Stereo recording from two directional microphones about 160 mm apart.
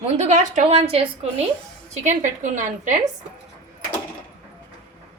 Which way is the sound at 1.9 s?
50° right (ahead or behind).